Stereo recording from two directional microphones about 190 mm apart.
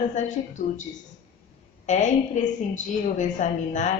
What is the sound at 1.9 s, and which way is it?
A woman's voice, 40° left (ahead or behind).